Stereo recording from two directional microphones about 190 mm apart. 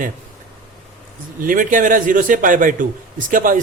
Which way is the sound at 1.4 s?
45° right (ahead or behind).